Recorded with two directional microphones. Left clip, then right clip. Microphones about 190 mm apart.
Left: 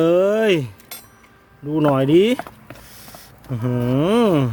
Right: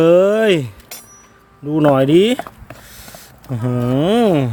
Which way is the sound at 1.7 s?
20° right (ahead or behind).